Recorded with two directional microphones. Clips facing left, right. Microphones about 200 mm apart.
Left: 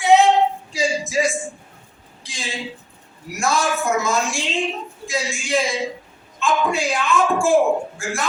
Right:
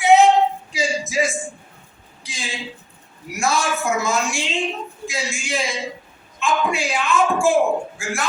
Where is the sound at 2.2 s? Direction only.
Centre (ahead or behind).